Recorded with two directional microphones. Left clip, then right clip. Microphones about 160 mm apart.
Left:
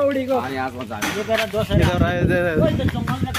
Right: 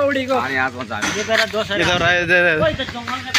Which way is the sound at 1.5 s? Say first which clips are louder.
Right 3 dB; 5° left (ahead or behind).